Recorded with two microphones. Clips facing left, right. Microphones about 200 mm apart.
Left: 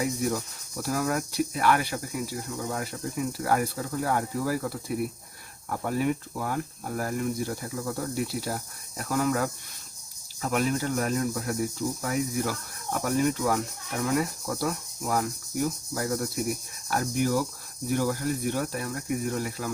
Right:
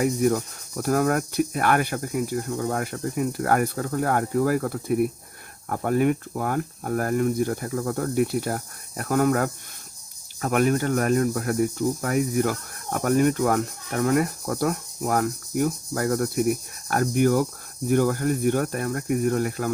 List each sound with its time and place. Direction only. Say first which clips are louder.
0.0 s speech: right 6 dB; 55° right (ahead or behind)